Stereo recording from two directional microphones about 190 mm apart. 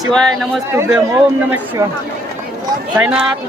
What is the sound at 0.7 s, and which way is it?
Speech, 10° right (ahead or behind).